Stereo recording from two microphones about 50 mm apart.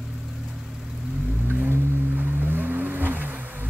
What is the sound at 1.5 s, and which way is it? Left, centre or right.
Vehicle, right.